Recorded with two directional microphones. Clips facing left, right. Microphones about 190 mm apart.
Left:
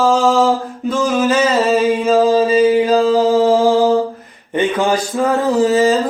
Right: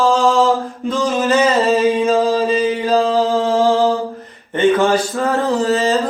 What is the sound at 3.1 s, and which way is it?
Mantra, 15° left (ahead or behind).